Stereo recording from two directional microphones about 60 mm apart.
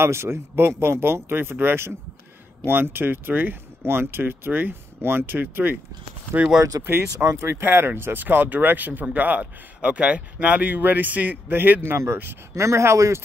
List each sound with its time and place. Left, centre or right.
0.0 s speech: right
6.8 s speech: right